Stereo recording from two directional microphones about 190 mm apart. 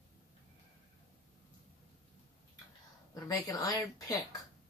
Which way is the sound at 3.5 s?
20° left (ahead or behind).